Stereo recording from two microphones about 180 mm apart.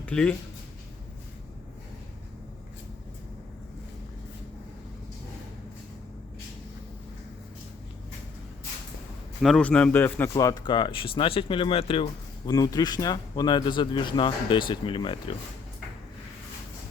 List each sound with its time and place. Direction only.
0.0 s speech: 5° left (ahead or behind)
9.4 s speech: 5° left (ahead or behind); by 12.0 s 30° left (ahead or behind)
12.5 s speech: 20° left (ahead or behind)